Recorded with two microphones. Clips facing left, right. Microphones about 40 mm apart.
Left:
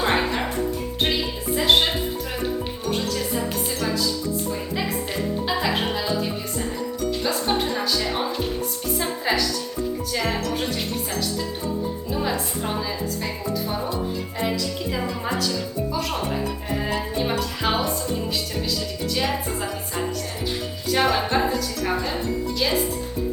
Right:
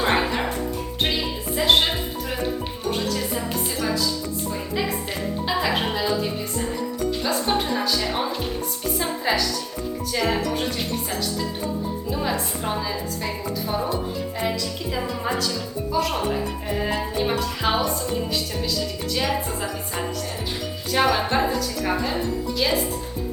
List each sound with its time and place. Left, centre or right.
0.0 s music: centre
1.5 s music: centre
5.5 s music: centre
10.1 s speech: centre
12.1 s speech: centre
19.1 s speech: centre
20.9 s speech: centre